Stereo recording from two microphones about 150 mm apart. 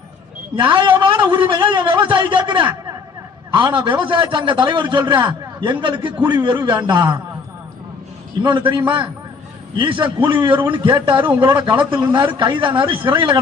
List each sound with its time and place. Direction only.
0.5 s a man's voice: 30° right (ahead or behind)
8.4 s a man's voice: 30° right (ahead or behind)
10.6 s a man's voice: 15° right (ahead or behind)
11.0 s a man's voice: 35° right (ahead or behind)